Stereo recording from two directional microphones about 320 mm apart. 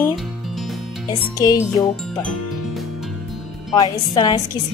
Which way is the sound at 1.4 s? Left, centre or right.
Centre.